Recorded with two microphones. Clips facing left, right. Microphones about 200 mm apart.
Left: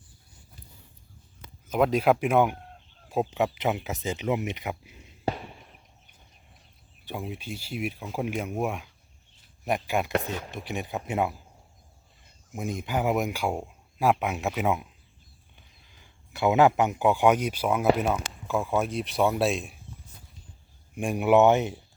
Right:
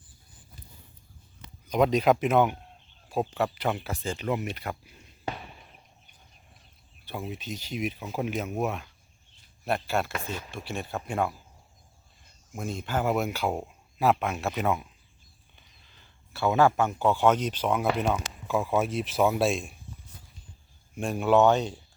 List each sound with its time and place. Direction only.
1.6 s speech: 5° left (ahead or behind)
5.3 s a sound: 35° left (ahead or behind)
7.0 s speech: 15° left (ahead or behind)
12.5 s speech: 15° left (ahead or behind)
14.5 s speech: 5° left (ahead or behind)
20.9 s speech: 15° left (ahead or behind)